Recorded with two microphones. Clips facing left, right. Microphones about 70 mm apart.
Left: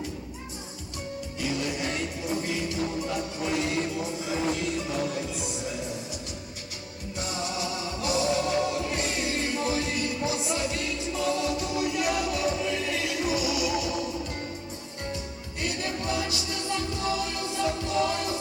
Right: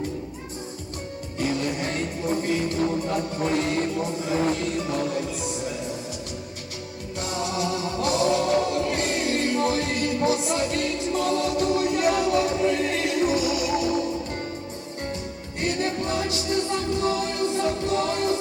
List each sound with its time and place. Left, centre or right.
1.4 s music: right
7.2 s music: right
15.6 s music: right